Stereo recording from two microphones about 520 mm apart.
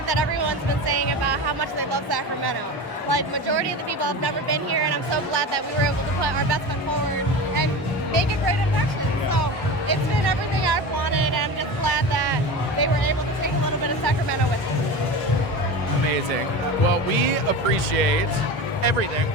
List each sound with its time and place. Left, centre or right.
0.1 s music: right
3.1 s speech: right
9.9 s music: right